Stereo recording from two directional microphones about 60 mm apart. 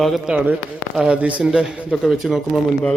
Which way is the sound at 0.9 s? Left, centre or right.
Centre.